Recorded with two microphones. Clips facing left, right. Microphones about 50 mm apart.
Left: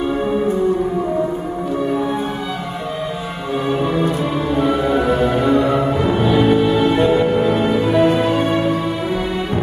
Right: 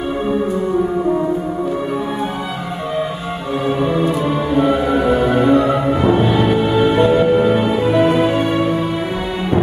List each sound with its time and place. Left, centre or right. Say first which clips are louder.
4.5 s music: right 1 dB; centre
6.6 s music: right 1 dB; centre